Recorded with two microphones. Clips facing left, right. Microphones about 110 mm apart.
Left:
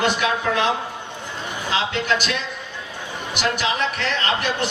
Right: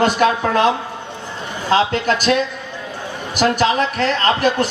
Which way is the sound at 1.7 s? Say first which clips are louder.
Right 7 dB; 40° right (ahead or behind).